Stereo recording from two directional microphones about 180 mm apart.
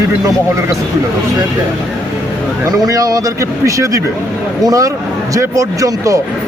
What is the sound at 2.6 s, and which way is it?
Speech, 20° right (ahead or behind).